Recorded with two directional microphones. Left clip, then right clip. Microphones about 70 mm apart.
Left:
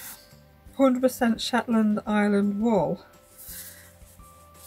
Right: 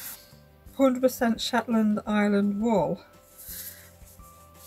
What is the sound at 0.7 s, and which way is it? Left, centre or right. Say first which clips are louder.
Speech: left 1 dB; centre.